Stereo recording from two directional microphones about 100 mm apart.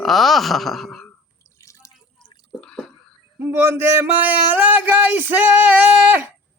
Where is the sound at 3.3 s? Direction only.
20° right (ahead or behind).